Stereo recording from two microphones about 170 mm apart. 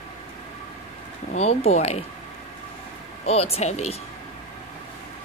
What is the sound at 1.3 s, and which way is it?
Speech, 40° left (ahead or behind).